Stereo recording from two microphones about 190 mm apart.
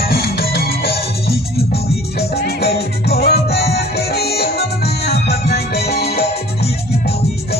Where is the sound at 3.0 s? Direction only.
55° left (ahead or behind).